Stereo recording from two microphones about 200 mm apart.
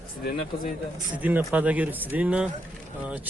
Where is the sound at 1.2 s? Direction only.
10° right (ahead or behind).